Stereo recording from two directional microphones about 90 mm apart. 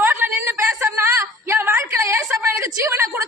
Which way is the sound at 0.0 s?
25° right (ahead or behind).